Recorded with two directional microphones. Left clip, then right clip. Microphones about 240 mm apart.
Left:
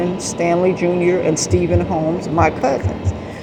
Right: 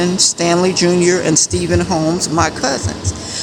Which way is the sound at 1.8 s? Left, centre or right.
Right.